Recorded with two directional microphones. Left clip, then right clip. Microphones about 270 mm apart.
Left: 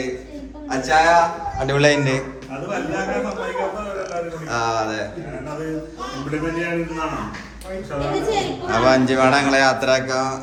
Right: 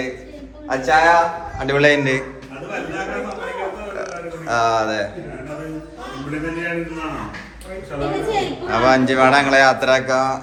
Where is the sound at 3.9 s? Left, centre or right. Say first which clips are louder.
Left 1 dB; centre.